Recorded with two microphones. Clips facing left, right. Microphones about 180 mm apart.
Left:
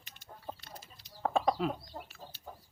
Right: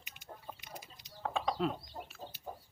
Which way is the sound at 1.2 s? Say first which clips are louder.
Left 6 dB; 40° left (ahead or behind).